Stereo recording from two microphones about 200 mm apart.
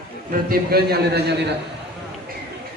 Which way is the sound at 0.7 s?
55° right (ahead or behind).